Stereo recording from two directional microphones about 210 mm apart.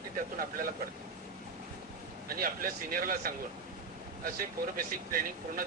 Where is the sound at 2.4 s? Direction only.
40° right (ahead or behind).